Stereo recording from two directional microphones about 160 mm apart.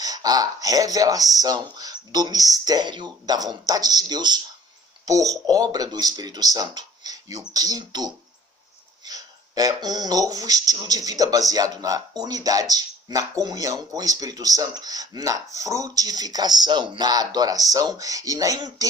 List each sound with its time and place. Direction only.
0.0 s speech: 25° right (ahead or behind)